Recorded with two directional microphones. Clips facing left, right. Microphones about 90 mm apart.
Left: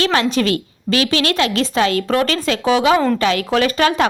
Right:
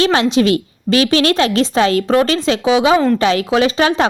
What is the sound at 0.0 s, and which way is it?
A woman's voice, 30° right (ahead or behind).